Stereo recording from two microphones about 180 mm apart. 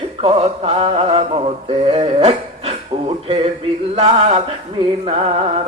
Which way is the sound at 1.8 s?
35° right (ahead or behind).